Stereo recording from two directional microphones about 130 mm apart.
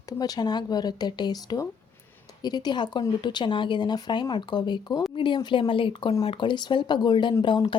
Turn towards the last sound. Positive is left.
turn(degrees=35)  # may be behind; listen again after turning